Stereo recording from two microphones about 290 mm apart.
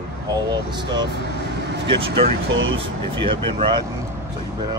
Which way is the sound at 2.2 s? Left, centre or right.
Right.